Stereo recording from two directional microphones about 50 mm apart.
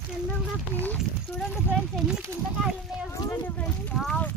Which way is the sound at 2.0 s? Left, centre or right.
Centre.